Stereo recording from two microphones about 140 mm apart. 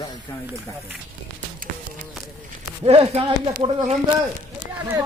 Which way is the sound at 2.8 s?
45° right (ahead or behind).